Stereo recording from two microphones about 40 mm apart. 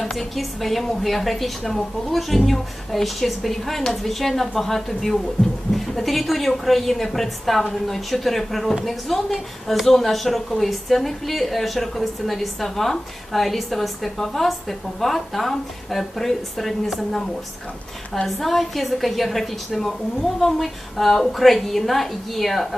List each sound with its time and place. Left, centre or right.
0.2 s a woman's voice: centre
18.3 s a woman's voice: centre